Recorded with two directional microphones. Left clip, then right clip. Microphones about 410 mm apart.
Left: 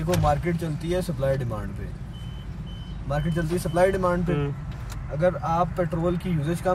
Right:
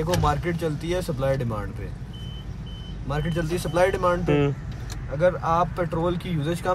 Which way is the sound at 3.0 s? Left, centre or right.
Centre.